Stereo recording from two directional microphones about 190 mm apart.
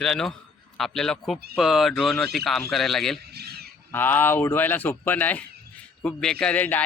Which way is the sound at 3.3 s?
55° right (ahead or behind).